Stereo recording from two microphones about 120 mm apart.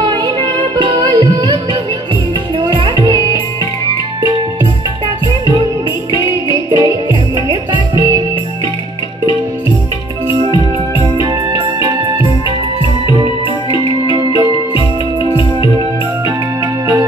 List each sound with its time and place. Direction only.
0.0 s music: 45° right (ahead or behind)
6.2 s music: 30° right (ahead or behind)
11.0 s music: 35° right (ahead or behind)
14.1 s music: 35° right (ahead or behind)